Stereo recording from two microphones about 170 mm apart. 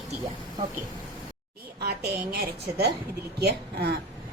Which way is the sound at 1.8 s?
70° right (ahead or behind).